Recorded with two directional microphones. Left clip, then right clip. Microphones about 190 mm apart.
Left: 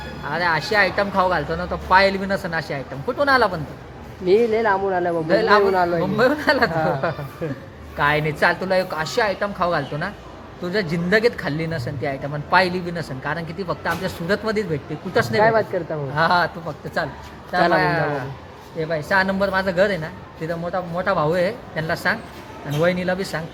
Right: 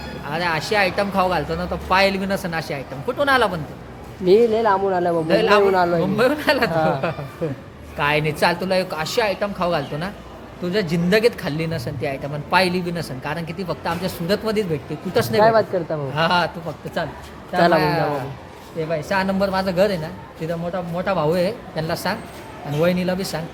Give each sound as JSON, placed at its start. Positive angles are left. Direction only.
{"t": 0.3, "sound": "speech", "side_deg": 0}
{"t": 4.3, "sound": "a woman's voice", "side_deg": -20}
{"t": 5.3, "sound": "a woman's voice", "side_deg": 10}
{"t": 5.7, "sound": "a woman's voice", "side_deg": -10}
{"t": 6.0, "sound": "a woman's voice", "side_deg": 10}
{"t": 6.7, "sound": "a woman's voice", "side_deg": -10}
{"t": 7.4, "sound": "a man's voice", "side_deg": -20}
{"t": 7.9, "sound": "a woman's voice", "side_deg": 0}
{"t": 16.1, "sound": "a woman's voice", "side_deg": 10}
{"t": 17.7, "sound": "speech", "side_deg": -5}
{"t": 20.5, "sound": "speech", "side_deg": 5}